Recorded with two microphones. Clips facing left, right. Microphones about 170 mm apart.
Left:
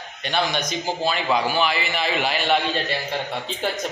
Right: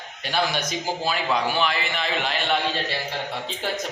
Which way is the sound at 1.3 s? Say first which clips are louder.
Left 2 dB; 5° left (ahead or behind).